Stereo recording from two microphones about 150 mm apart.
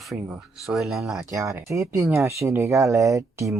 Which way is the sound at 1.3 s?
20° right (ahead or behind).